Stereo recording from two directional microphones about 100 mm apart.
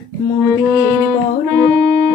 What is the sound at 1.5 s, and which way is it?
Music, 25° left (ahead or behind).